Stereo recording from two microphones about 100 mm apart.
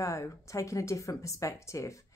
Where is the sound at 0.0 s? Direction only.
30° left (ahead or behind).